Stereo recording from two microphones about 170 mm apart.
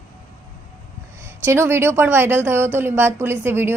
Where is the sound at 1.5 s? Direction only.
15° right (ahead or behind).